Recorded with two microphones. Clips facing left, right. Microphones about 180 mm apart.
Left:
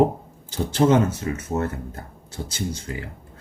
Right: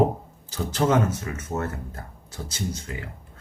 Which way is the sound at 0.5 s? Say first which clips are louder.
Left 4 dB; 30° left (ahead or behind).